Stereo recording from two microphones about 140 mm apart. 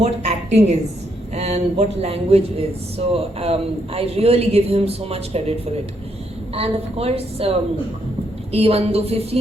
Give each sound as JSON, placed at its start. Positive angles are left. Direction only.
{"t": 0.0, "sound": "a woman's voice", "side_deg": -50}
{"t": 8.5, "sound": "a man's voice", "side_deg": -45}